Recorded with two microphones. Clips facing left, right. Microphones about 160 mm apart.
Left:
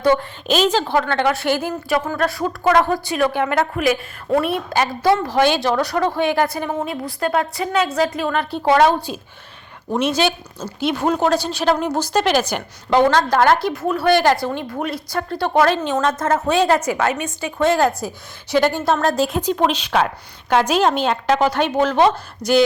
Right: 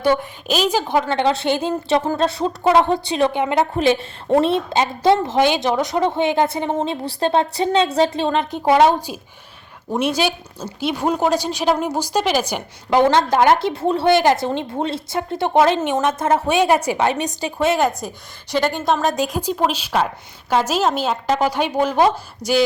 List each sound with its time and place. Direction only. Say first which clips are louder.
0.4 s a woman's voice: left 2 dB; 5° right (ahead or behind)
17.1 s a woman's voice: right 1 dB; 35° right (ahead or behind)
17.6 s a woman's voice: left 2 dB; 5° right (ahead or behind)
18.7 s a woman's voice: left 1 dB; 15° right (ahead or behind)